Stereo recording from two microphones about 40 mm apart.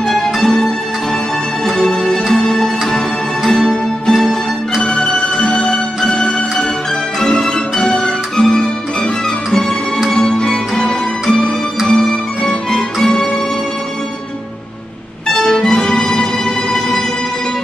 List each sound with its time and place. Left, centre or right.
0.1 s music: centre
1.8 s music: centre
3.4 s music: centre
4.8 s music: left
10.1 s music: centre
11.9 s music: left
15.2 s music: centre